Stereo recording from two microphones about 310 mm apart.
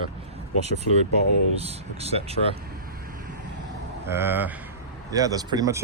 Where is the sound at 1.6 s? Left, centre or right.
Centre.